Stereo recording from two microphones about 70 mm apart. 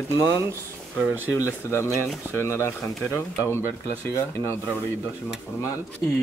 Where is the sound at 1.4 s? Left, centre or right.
Left.